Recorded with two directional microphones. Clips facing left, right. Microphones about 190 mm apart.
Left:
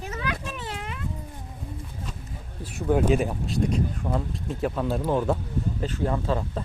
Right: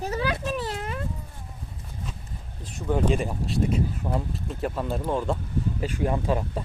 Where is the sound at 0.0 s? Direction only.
35° right (ahead or behind).